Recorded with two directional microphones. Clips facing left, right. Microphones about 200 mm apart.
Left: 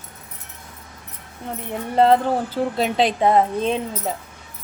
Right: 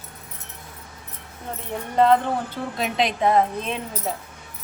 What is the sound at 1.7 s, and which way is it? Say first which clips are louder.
A woman's voice: left 2 dB; 30° left (ahead or behind).